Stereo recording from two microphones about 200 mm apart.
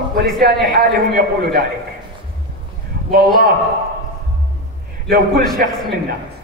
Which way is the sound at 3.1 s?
45° right (ahead or behind).